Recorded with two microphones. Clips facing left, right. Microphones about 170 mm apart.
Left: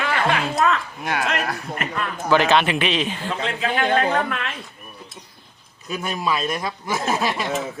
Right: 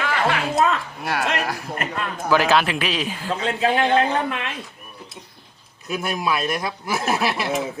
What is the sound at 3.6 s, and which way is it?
Speech, 30° right (ahead or behind).